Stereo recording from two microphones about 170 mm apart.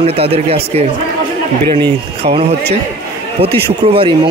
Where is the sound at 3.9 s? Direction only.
30° right (ahead or behind).